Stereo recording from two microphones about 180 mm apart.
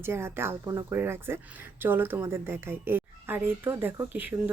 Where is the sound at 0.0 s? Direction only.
15° right (ahead or behind).